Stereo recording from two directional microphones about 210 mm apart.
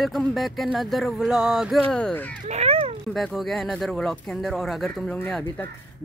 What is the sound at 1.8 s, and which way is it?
Speech, 5° left (ahead or behind).